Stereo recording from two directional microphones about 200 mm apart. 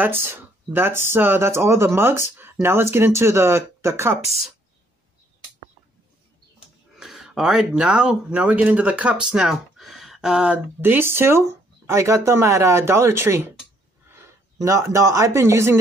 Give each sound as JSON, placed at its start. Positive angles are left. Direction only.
{"t": 0.0, "sound": "speech", "side_deg": -10}
{"t": 7.0, "sound": "speech", "side_deg": 0}